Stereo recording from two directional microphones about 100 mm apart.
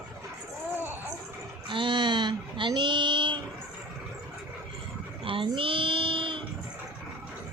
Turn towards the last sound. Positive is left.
turn(degrees=-60)  # may be behind; listen again after turning